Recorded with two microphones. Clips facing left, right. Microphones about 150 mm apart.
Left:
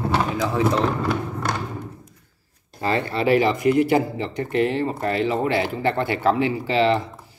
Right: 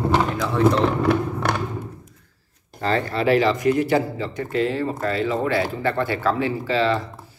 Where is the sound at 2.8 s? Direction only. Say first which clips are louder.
Even; 15° left (ahead or behind).